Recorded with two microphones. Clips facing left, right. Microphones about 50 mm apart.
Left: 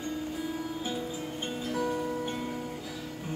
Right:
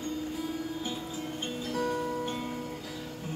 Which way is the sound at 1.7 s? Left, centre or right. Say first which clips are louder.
Even; centre.